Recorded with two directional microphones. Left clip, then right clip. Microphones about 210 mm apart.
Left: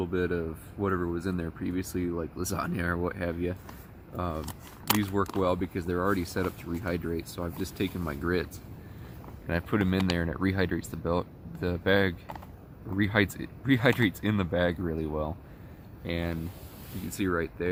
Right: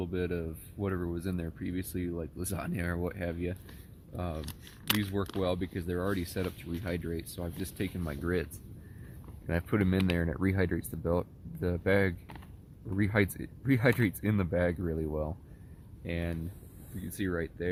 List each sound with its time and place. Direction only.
0.0 s speech: 25° right (ahead or behind)
4.4 s speech: 5° left (ahead or behind)
5.4 s speech: 20° right (ahead or behind)
9.5 s speech: 30° right (ahead or behind)